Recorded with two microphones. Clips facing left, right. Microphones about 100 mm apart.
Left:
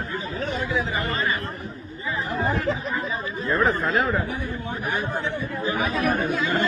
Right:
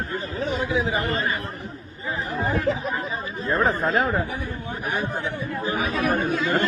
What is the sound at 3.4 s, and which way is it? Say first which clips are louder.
Speech: even; 30° right (ahead or behind).